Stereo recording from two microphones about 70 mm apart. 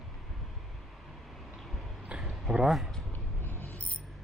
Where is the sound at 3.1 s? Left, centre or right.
Left.